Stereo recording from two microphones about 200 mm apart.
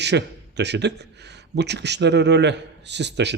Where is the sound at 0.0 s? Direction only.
55° right (ahead or behind).